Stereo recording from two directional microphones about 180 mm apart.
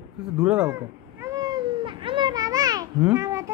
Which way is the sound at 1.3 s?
20° right (ahead or behind).